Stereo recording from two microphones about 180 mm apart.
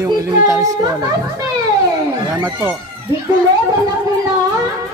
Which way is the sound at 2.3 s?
10° right (ahead or behind).